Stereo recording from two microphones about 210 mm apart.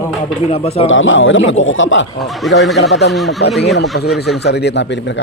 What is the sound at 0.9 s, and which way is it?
A man's voice, 65° left (ahead or behind).